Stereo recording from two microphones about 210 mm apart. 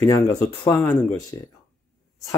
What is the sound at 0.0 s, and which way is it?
Speech, 15° left (ahead or behind).